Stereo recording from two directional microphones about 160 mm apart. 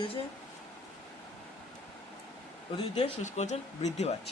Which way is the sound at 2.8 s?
35° left (ahead or behind).